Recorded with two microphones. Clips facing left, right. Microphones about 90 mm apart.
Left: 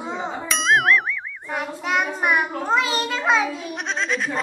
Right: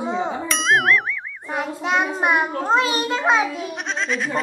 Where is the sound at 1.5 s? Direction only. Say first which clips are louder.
Right 2 dB; 20° right (ahead or behind).